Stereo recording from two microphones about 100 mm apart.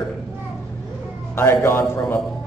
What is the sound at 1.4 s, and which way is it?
Speech, 25° left (ahead or behind).